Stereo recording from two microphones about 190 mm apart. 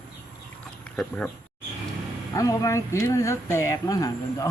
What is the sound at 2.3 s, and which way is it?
Speech, 20° left (ahead or behind).